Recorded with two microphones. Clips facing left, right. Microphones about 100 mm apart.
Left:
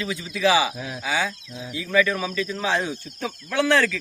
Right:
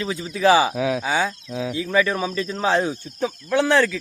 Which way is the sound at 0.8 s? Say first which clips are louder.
Right 11 dB; 90° right.